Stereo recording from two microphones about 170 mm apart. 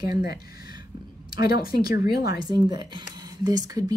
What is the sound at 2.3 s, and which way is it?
Speech, 25° right (ahead or behind).